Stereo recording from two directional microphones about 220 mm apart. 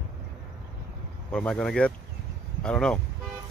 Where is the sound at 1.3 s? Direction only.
5° left (ahead or behind).